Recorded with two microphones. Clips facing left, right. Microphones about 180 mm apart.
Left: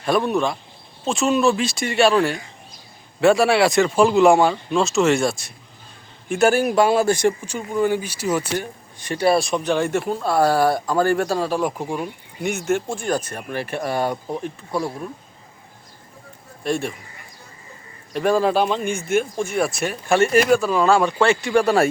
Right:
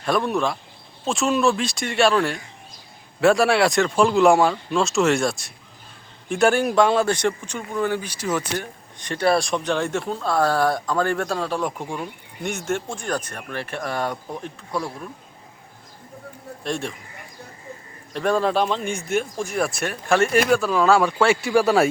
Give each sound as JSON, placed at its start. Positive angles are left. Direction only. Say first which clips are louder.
{"t": 0.0, "sound": "a man's voice", "louder": "left 2 dB", "side_deg": 0}
{"t": 14.7, "sound": "speech", "louder": "left 3 dB", "side_deg": 25}
{"t": 16.6, "sound": "speech", "louder": "left 4 dB", "side_deg": 5}
{"t": 18.1, "sound": "speech", "louder": "left 3 dB", "side_deg": 5}